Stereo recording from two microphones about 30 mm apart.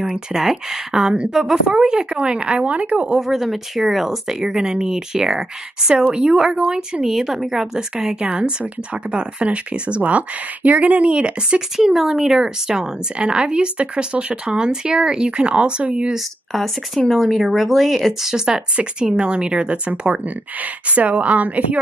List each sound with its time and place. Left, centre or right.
0.0 s speech: centre
1.3 s speech: right
3.2 s speech: centre
6.1 s speech: right
7.1 s speech: centre
8.2 s a woman's voice: right
11.1 s speech: right
11.9 s speech: centre
13.2 s speech: right
16.5 s speech: centre
18.9 s speech: right
20.2 s a woman's voice: right